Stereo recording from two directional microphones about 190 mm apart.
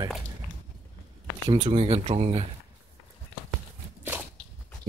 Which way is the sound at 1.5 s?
30° right (ahead or behind).